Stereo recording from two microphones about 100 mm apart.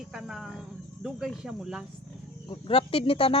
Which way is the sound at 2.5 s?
65° left (ahead or behind).